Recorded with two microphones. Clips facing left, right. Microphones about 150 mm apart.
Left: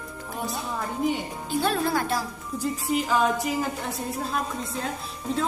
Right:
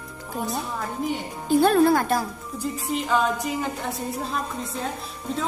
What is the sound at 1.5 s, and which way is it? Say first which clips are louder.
Speech: right 8 dB; 50° right (ahead or behind).